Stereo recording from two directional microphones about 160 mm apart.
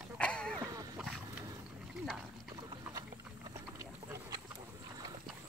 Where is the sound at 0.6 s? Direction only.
20° right (ahead or behind).